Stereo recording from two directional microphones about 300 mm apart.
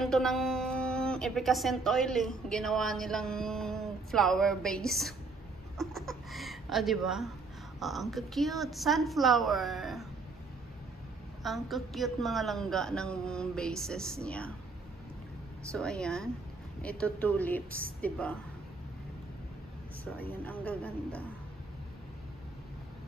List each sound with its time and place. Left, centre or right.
0.0 s speech: centre
11.4 s speech: centre
15.7 s speech: centre
20.2 s speech: centre